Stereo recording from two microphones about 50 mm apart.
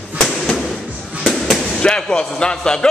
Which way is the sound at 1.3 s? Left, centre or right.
Centre.